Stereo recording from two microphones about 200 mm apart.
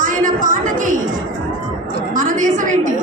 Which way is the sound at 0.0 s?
40° right (ahead or behind).